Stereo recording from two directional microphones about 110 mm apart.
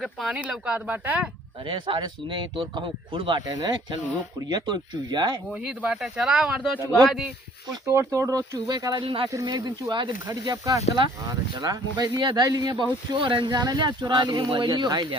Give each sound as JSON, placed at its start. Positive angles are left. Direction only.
{"t": 0.0, "sound": "speech", "side_deg": 0}
{"t": 1.6, "sound": "speech", "side_deg": -50}
{"t": 5.5, "sound": "speech", "side_deg": -10}
{"t": 7.9, "sound": "speech", "side_deg": -25}
{"t": 9.0, "sound": "speech", "side_deg": -55}
{"t": 9.3, "sound": "speech", "side_deg": -35}
{"t": 13.1, "sound": "speech", "side_deg": -50}